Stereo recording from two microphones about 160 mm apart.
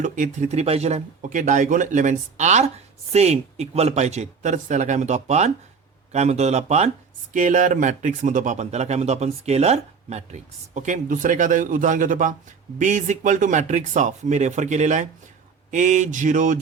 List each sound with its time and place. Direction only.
0.0 s speech: 50° right (ahead or behind)
7.3 s speech: 55° right (ahead or behind)